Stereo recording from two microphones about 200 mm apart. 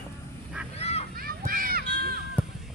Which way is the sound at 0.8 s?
30° left (ahead or behind).